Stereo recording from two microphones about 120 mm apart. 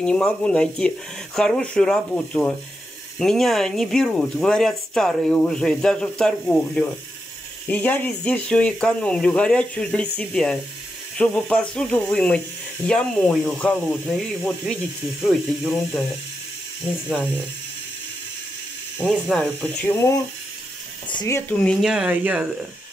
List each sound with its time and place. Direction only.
0.0 s speech: 10° left (ahead or behind)
15.7 s speech: centre (ahead or behind)
18.9 s speech: 5° left (ahead or behind)
21.3 s speech: 15° left (ahead or behind)
21.8 s speech: 5° right (ahead or behind)